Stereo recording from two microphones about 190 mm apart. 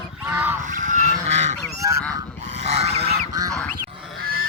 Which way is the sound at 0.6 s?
40° right (ahead or behind).